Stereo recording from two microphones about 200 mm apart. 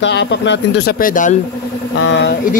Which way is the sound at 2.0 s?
60° left (ahead or behind).